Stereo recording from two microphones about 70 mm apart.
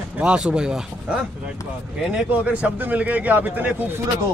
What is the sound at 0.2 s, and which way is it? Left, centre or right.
Speech, centre.